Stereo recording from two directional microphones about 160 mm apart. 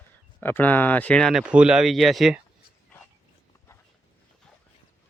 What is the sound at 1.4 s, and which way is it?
Speech, 5° right (ahead or behind).